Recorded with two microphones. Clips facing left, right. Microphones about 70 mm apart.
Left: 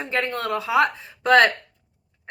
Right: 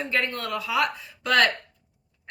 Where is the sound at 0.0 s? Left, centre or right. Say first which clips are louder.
Left 2 dB; left.